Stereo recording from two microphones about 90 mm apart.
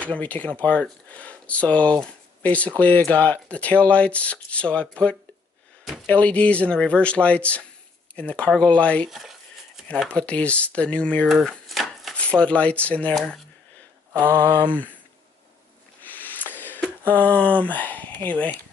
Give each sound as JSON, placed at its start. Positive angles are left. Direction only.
{"t": 0.0, "sound": "speech", "side_deg": 15}
{"t": 6.0, "sound": "speech", "side_deg": 15}
{"t": 9.1, "sound": "speech", "side_deg": 0}
{"t": 9.8, "sound": "speech", "side_deg": 10}
{"t": 11.2, "sound": "chopping", "side_deg": 0}
{"t": 12.2, "sound": "speech", "side_deg": 15}
{"t": 13.1, "sound": "speech", "side_deg": 5}
{"t": 14.2, "sound": "a sound", "side_deg": -25}
{"t": 16.0, "sound": "a sound", "side_deg": 20}